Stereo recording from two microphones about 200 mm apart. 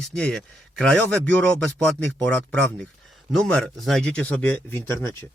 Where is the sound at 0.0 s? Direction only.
5° left (ahead or behind).